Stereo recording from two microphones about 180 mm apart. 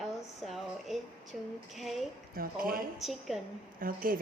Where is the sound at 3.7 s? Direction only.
50° right (ahead or behind).